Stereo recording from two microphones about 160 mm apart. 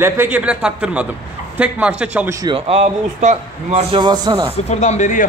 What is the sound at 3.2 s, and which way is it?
Speech, 45° right (ahead or behind).